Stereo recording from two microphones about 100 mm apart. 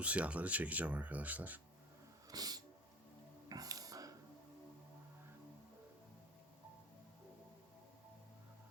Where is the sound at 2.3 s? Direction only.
40° right (ahead or behind).